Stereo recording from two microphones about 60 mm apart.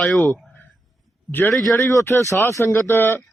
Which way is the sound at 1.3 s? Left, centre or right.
Left.